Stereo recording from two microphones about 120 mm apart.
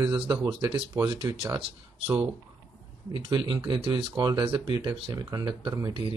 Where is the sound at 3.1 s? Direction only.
40° right (ahead or behind).